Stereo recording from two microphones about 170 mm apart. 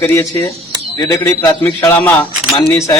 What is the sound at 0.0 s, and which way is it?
A man's voice, 15° left (ahead or behind).